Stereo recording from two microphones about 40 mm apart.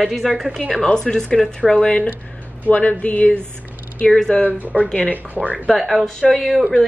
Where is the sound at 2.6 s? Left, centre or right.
Left.